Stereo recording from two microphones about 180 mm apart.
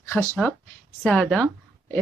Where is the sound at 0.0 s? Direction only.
15° left (ahead or behind).